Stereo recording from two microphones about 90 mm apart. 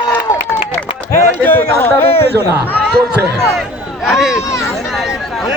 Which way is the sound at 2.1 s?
90° left.